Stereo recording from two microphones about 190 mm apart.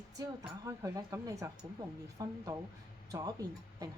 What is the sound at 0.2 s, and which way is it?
Speech, 15° right (ahead or behind).